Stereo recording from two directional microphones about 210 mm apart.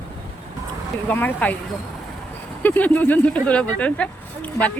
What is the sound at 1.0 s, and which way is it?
Speech, 10° left (ahead or behind).